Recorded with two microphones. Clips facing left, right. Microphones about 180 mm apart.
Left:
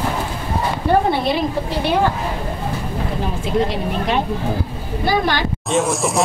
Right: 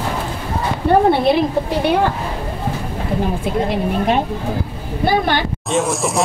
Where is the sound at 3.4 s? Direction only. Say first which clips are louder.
Right 1 dB; 50° right (ahead or behind).